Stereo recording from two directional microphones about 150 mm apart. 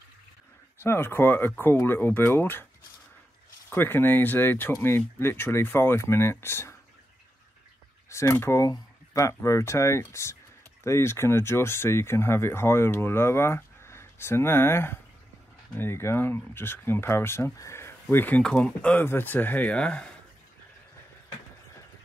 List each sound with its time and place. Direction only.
0.8 s speech: 15° left (ahead or behind)
3.7 s speech: 15° left (ahead or behind)
8.1 s speech: 20° left (ahead or behind)